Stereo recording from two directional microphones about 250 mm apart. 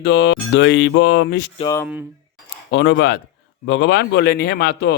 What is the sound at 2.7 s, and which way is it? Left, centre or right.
A man's voice, left.